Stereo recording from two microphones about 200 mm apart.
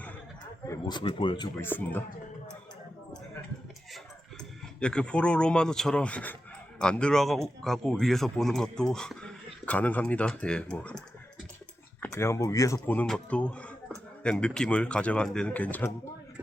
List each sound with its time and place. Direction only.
0.7 s speech: 20° left (ahead or behind)
1.6 s speech: 10° left (ahead or behind)
4.8 s a man's voice: 5° left (ahead or behind)